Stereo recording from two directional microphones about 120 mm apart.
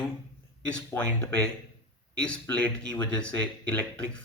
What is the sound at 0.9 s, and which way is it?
Speech, 15° left (ahead or behind).